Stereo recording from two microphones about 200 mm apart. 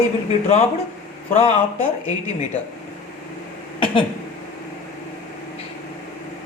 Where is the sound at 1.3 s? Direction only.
35° left (ahead or behind).